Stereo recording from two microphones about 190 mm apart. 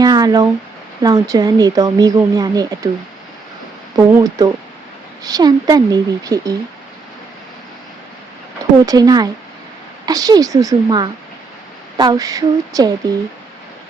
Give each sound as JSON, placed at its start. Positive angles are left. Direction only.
{"t": 0.0, "sound": "speech", "side_deg": -20}
{"t": 3.9, "sound": "speech", "side_deg": -20}
{"t": 8.9, "sound": "speech", "side_deg": -20}